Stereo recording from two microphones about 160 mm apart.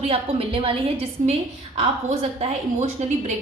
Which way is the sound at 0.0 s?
35° right (ahead or behind).